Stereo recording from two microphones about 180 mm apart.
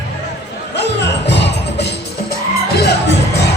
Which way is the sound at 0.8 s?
75° left (ahead or behind).